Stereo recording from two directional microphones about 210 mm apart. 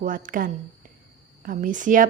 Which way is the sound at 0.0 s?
40° right (ahead or behind).